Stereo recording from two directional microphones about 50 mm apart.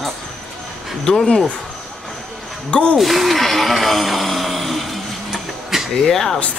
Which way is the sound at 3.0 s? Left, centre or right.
Centre.